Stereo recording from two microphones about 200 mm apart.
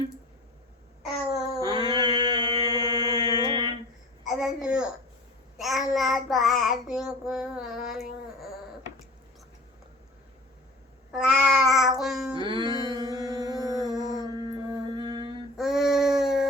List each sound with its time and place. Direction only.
1.5 s mantra: 20° right (ahead or behind)
3.4 s a sound: 20° right (ahead or behind)
4.2 s a sound: centre (ahead or behind)
5.5 s child singing: centre (ahead or behind)
11.1 s cat: centre (ahead or behind)
12.3 s music: 25° right (ahead or behind)
15.5 s child singing: centre (ahead or behind)